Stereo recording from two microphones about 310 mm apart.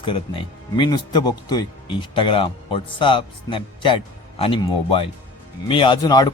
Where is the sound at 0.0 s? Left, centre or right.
Centre.